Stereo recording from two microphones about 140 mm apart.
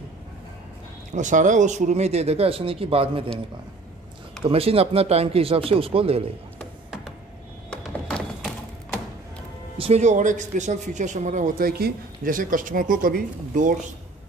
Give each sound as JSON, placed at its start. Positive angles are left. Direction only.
{"t": 1.1, "sound": "speech", "side_deg": -60}
{"t": 4.5, "sound": "speech", "side_deg": -45}
{"t": 7.7, "sound": "music", "side_deg": 5}
{"t": 9.8, "sound": "speech", "side_deg": -50}